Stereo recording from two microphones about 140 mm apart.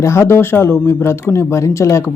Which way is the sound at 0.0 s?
20° left (ahead or behind).